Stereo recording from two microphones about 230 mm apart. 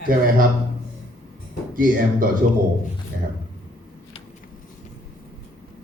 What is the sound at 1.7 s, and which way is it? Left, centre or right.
Speech, right.